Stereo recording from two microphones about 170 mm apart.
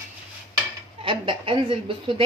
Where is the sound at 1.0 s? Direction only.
30° right (ahead or behind).